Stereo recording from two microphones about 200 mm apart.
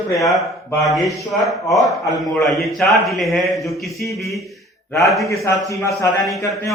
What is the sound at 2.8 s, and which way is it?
A man's voice, centre (ahead or behind).